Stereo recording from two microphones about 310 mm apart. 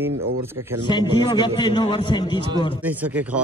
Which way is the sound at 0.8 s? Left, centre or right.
Centre.